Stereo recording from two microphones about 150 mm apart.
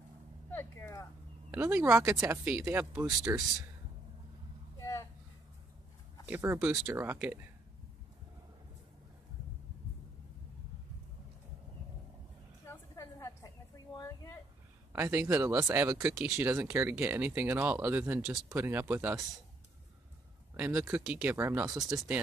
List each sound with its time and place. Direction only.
0.5 s speech: 15° left (ahead or behind)
1.5 s speech: 15° right (ahead or behind)
4.7 s a sound: 20° left (ahead or behind)
6.2 s speech: 15° right (ahead or behind)
12.6 s a sound: 20° left (ahead or behind)
14.9 s speech: 15° right (ahead or behind)
20.5 s speech: 15° right (ahead or behind)